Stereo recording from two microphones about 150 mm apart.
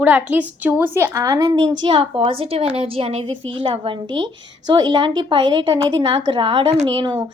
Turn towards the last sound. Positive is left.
turn(degrees=-30)  # may be behind; listen again after turning